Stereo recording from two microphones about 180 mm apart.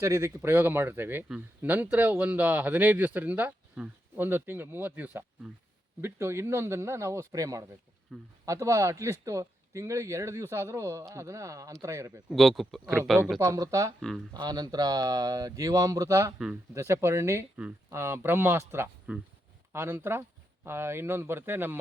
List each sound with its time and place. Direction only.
0.0 s speech: 15° right (ahead or behind)
8.1 s speech: centre (ahead or behind)
8.4 s speech: 15° right (ahead or behind)
12.3 s speech: centre (ahead or behind)
13.4 s speech: 15° right (ahead or behind)